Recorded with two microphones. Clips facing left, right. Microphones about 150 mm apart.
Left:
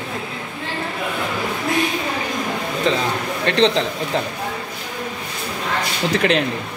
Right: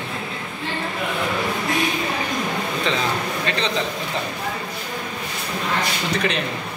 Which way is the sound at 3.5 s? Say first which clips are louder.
Left 11 dB; 90° left.